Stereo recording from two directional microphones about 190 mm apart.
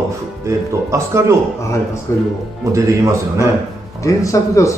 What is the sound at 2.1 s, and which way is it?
Speech, 15° left (ahead or behind).